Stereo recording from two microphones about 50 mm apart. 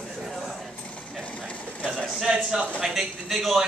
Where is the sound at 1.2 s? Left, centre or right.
Left.